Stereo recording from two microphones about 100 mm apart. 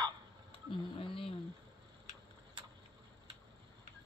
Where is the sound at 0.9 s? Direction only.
60° left (ahead or behind).